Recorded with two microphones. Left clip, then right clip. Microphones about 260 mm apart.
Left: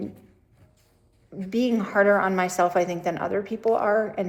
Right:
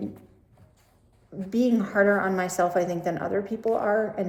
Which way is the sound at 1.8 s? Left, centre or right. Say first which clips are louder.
Left 4 dB; centre.